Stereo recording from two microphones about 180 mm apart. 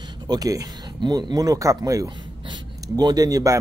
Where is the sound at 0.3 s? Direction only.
20° right (ahead or behind).